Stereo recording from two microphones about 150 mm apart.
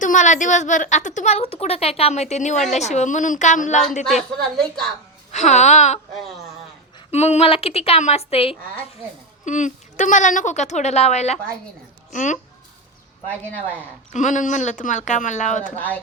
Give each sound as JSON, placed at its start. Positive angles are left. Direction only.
{"t": 0.0, "sound": "a woman's voice", "side_deg": 55}
{"t": 4.0, "sound": "a woman's voice", "side_deg": 5}
{"t": 5.3, "sound": "a woman's voice", "side_deg": 50}
{"t": 7.1, "sound": "a woman's voice", "side_deg": 45}
{"t": 9.4, "sound": "a woman's voice", "side_deg": 55}
{"t": 14.1, "sound": "speech", "side_deg": 55}